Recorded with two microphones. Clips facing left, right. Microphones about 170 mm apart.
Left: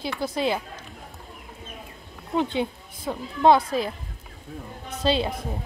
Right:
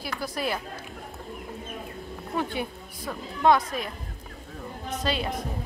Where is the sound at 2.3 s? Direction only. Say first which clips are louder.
Left 5 dB; 20° left (ahead or behind).